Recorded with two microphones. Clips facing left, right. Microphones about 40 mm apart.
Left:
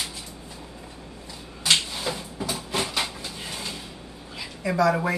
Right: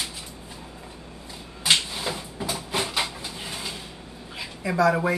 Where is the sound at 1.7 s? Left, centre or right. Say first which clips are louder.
Even; centre.